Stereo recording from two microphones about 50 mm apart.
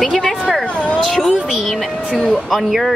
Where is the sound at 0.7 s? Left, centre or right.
Left.